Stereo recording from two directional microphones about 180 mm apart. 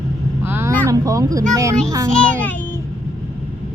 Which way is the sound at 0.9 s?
20° right (ahead or behind).